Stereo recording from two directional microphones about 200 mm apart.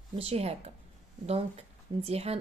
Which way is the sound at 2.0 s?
30° right (ahead or behind).